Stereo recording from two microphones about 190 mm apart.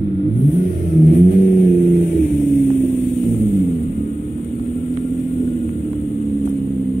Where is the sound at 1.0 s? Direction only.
40° left (ahead or behind).